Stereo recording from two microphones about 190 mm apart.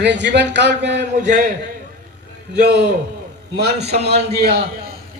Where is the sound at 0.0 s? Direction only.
65° right (ahead or behind).